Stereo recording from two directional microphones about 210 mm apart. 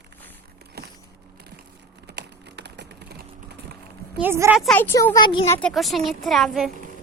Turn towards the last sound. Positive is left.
turn(degrees=0)  # may be behind; listen again after turning